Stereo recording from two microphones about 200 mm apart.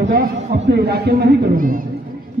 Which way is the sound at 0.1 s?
55° right (ahead or behind).